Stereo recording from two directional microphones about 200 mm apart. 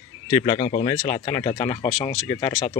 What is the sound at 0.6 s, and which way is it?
Speech, 40° left (ahead or behind).